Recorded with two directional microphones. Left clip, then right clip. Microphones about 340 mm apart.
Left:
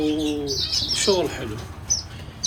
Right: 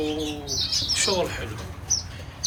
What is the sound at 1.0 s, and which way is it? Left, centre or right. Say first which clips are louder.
Speech: left 3 dB; centre.